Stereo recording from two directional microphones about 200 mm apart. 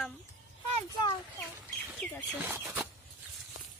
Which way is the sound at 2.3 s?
10° right (ahead or behind).